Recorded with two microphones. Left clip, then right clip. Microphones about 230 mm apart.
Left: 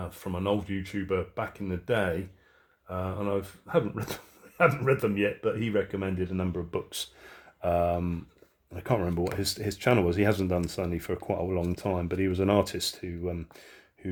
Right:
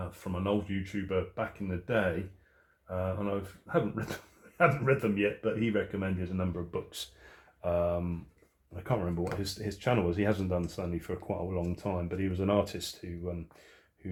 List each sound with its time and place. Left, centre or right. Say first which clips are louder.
0.1 s speech: left 3 dB; left